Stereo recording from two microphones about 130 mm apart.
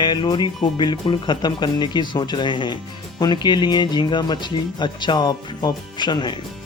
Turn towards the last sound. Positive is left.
turn(degrees=35)  # may be behind; listen again after turning